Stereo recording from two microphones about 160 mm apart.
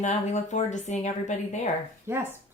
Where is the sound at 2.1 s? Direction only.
15° right (ahead or behind).